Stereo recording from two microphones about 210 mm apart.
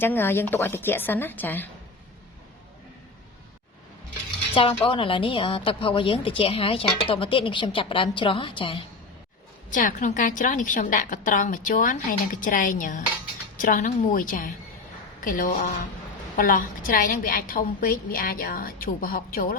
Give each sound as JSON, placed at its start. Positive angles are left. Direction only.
{"t": 0.0, "sound": "a woman's voice", "side_deg": 10}
{"t": 4.5, "sound": "a woman's voice", "side_deg": 25}
{"t": 9.6, "sound": "a woman's voice", "side_deg": 40}